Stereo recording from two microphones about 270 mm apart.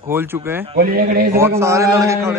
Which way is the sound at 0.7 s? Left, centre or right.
Right.